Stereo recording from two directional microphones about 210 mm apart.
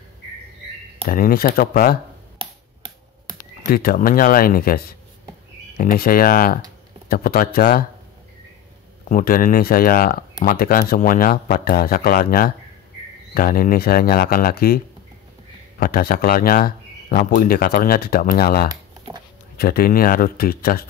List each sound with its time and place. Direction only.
1.0 s speech: 40° left (ahead or behind)
3.7 s speech: 45° left (ahead or behind)
9.1 s speech: 40° left (ahead or behind)
15.8 s speech: 45° left (ahead or behind)
18.7 s a sound: 20° right (ahead or behind)
19.5 s speech: 45° left (ahead or behind)